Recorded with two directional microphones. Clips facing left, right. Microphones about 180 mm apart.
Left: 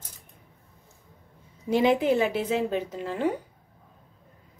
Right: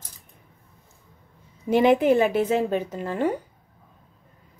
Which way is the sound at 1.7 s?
55° right (ahead or behind).